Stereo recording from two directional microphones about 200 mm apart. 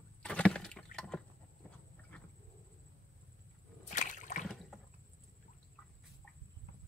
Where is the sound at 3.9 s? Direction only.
40° left (ahead or behind).